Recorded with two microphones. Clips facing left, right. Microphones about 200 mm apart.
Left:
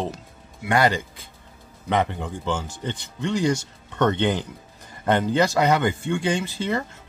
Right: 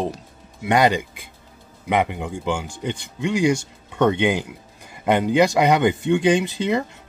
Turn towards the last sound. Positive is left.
turn(degrees=-15)  # may be behind; listen again after turning